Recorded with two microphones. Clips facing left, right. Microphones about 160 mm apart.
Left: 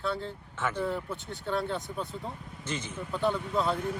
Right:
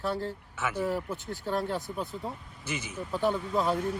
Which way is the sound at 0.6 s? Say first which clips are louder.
Right 1 dB; 10° right (ahead or behind).